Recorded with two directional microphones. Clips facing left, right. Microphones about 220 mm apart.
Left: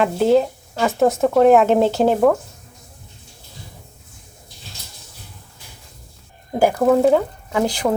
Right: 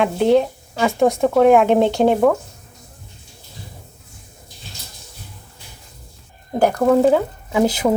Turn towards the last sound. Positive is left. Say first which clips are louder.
# right 3 dB
turn(degrees=-5)  # may be behind; listen again after turning